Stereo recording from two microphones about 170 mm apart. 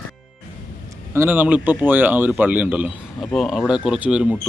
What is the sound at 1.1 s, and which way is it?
Speech, 15° right (ahead or behind).